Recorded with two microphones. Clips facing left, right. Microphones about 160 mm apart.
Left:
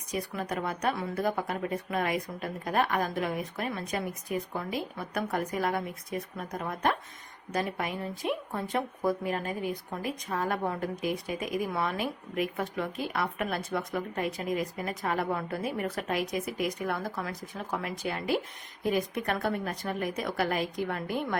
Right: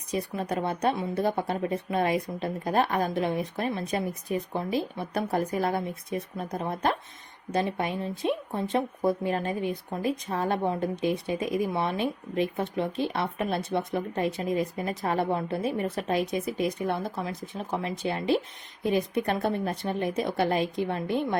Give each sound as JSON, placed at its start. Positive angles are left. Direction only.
{"t": 0.1, "sound": "speech", "side_deg": -30}